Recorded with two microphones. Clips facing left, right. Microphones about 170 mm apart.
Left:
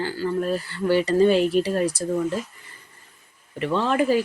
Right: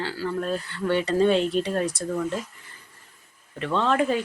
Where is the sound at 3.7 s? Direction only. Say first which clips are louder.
Left 2 dB; 5° left (ahead or behind).